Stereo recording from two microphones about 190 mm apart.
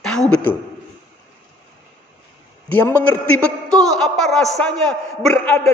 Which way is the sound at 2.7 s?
10° left (ahead or behind).